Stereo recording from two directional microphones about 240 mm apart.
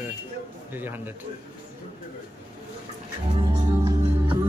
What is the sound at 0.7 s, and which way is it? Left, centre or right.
Speech, centre.